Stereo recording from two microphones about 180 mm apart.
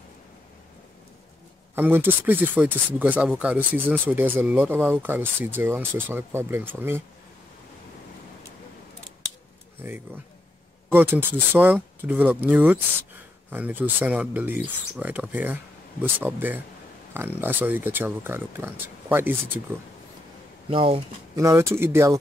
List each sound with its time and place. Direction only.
1.8 s speech: 10° right (ahead or behind)
9.8 s speech: 10° right (ahead or behind)
20.7 s speech: 30° right (ahead or behind)
21.4 s speech: 15° right (ahead or behind)